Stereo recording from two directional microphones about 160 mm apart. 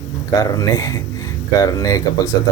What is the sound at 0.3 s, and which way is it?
Speech, 20° left (ahead or behind).